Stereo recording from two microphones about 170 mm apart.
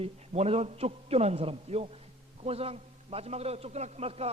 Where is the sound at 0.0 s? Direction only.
35° right (ahead or behind).